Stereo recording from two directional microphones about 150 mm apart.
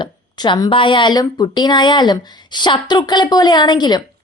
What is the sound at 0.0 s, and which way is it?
A woman's voice, 30° left (ahead or behind).